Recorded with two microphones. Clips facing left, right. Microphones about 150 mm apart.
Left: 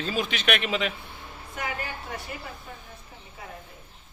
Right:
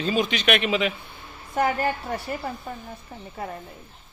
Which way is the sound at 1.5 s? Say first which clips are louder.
Right 11 dB; 45° right (ahead or behind).